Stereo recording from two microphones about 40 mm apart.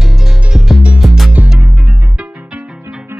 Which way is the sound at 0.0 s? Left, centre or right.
Centre.